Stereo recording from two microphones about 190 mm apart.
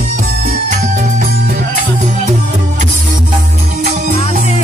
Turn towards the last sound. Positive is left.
turn(degrees=-40)  # may be behind; listen again after turning